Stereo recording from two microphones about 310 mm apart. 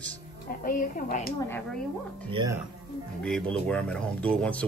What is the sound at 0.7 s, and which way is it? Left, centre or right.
Speech, left.